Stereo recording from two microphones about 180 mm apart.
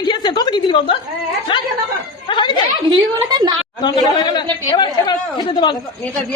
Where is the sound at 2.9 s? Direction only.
20° right (ahead or behind).